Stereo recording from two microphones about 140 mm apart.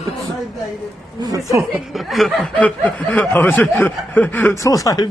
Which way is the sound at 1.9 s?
Centre (ahead or behind).